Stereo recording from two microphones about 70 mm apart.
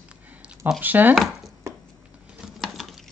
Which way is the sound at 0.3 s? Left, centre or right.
Centre.